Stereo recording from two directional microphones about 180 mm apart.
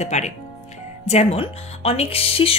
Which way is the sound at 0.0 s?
40° left (ahead or behind).